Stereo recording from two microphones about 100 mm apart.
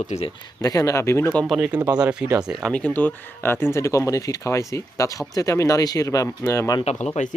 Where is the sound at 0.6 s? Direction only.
35° left (ahead or behind).